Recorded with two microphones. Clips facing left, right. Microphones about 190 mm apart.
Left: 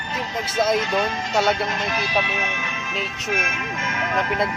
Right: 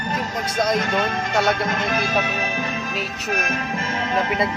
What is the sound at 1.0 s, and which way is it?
Speech, 55° right (ahead or behind).